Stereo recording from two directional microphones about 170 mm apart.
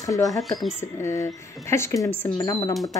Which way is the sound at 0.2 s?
Centre (ahead or behind).